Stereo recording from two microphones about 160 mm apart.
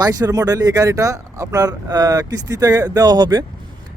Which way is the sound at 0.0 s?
25° right (ahead or behind).